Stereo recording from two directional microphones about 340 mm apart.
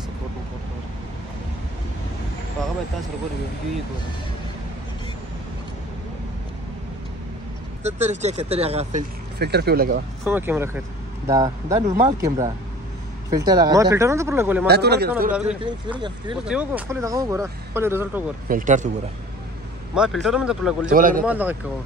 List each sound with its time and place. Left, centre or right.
7.8 s speech: centre
9.4 s speech: right
10.2 s speech: centre
14.7 s speech: right
15.4 s speech: centre
18.5 s speech: right
20.0 s speech: centre
20.9 s speech: right
21.3 s speech: centre